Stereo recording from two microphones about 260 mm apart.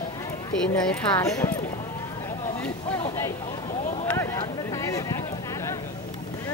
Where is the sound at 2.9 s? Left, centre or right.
Centre.